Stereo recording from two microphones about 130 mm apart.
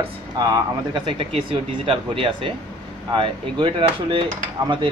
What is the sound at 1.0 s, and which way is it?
A man's voice, 40° right (ahead or behind).